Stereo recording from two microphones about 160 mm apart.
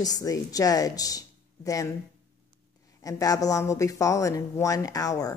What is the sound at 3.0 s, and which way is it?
A woman's voice, 20° left (ahead or behind).